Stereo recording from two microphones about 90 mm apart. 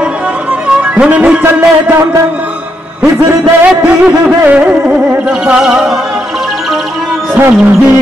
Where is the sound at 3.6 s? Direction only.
15° right (ahead or behind).